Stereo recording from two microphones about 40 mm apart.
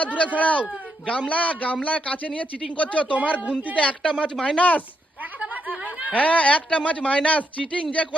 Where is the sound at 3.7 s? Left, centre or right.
Left.